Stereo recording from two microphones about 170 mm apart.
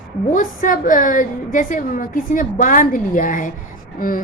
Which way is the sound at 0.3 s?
50° left (ahead or behind).